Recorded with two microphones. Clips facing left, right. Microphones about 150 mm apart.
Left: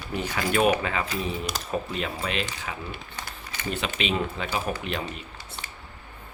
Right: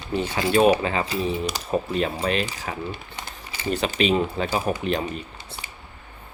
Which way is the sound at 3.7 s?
35° right (ahead or behind).